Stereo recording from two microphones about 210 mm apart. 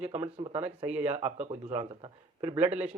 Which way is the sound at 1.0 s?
30° right (ahead or behind).